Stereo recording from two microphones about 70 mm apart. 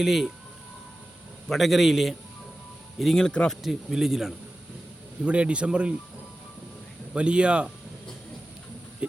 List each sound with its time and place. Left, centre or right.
0.0 s speech: centre
1.5 s speech: centre
5.2 s a man's voice: centre
7.1 s a man's voice: centre